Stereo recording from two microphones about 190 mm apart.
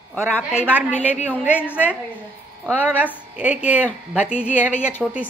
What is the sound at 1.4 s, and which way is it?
A woman's voice, 5° right (ahead or behind).